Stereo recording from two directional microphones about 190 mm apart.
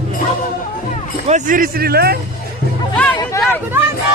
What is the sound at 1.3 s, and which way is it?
Speech, 40° right (ahead or behind).